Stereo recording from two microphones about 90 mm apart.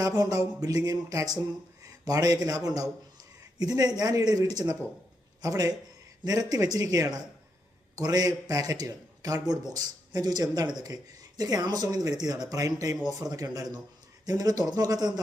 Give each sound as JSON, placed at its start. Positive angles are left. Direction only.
{"t": 0.0, "sound": "a man's voice", "side_deg": -40}